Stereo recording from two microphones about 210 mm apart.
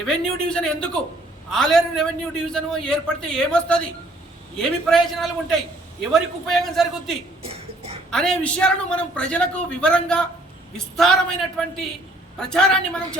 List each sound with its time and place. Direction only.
0.0 s a man's voice: 5° left (ahead or behind)
7.4 s a sound: 30° right (ahead or behind)
8.1 s a man's voice: 5° left (ahead or behind)